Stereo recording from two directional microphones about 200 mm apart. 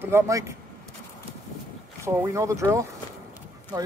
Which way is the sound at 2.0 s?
15° right (ahead or behind).